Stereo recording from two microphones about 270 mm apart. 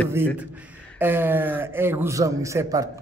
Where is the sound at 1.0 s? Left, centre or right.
Centre.